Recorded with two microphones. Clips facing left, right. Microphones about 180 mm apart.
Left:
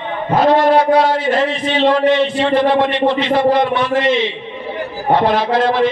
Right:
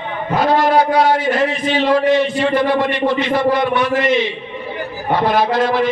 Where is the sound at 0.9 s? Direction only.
30° left (ahead or behind).